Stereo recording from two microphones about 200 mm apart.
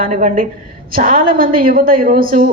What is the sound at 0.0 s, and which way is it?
A woman's voice, 40° right (ahead or behind).